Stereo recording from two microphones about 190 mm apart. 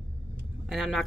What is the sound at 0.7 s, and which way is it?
Speech, centre (ahead or behind).